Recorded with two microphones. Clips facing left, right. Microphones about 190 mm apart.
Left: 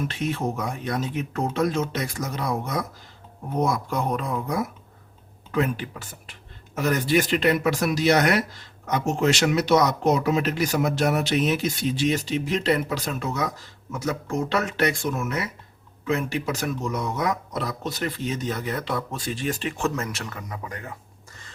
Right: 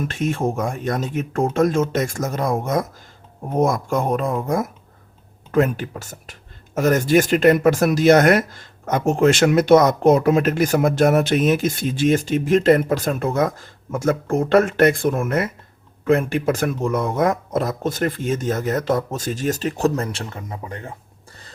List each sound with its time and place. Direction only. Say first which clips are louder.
0.0 s speech: right 5 dB; 45° right (ahead or behind); by 20.9 s 25° right (ahead or behind)